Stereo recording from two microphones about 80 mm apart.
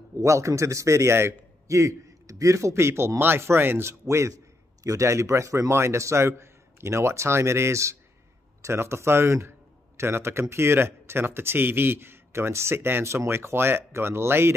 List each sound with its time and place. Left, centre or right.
0.2 s a man's voice: right
4.8 s a man's voice: right